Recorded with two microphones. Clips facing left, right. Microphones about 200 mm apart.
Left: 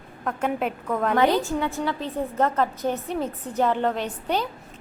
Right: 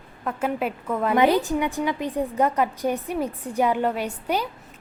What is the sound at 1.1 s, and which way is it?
A woman's voice, 15° right (ahead or behind).